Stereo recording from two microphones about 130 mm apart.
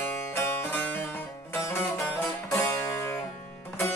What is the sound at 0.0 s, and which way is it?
Music, 20° left (ahead or behind).